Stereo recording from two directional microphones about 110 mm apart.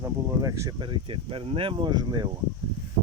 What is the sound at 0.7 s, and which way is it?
Speech, 45° right (ahead or behind).